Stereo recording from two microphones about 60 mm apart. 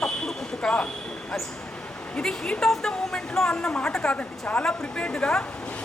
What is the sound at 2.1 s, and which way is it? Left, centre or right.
A woman's voice, centre.